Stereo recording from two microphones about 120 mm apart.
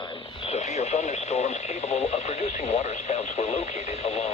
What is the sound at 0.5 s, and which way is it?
Radio, 65° left (ahead or behind).